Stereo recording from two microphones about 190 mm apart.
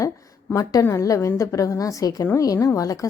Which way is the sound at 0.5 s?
15° left (ahead or behind).